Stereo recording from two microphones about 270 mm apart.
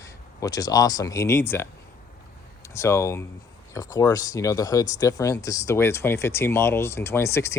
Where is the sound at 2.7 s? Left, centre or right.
Centre.